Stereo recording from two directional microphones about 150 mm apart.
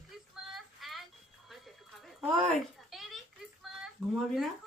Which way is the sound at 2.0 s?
Centre (ahead or behind).